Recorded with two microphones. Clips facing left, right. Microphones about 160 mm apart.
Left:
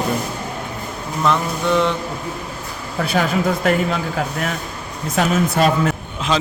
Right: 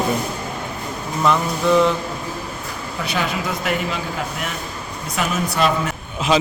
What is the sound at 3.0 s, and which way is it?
Speech, 50° left (ahead or behind).